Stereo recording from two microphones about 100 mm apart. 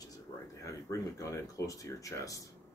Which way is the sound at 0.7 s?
30° left (ahead or behind).